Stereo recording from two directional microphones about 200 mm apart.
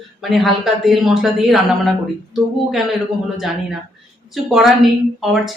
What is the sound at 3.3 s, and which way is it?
A woman's voice, centre (ahead or behind).